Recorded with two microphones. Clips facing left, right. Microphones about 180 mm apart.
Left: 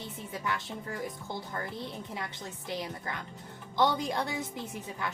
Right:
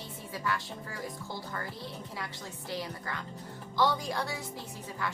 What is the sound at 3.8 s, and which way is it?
Speech, 20° left (ahead or behind).